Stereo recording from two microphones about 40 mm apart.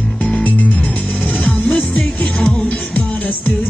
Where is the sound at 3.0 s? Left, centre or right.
Left.